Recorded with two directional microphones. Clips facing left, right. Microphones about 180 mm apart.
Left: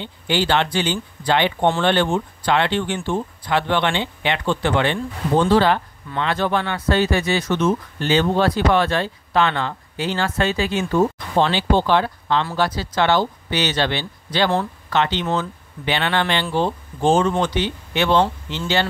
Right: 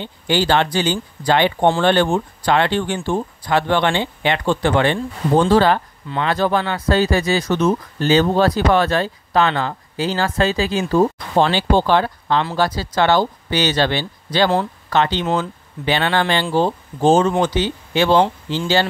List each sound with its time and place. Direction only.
0.0 s speech: 40° right (ahead or behind)